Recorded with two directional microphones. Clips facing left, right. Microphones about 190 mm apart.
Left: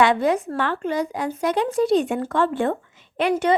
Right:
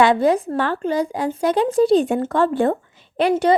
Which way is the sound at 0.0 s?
35° right (ahead or behind).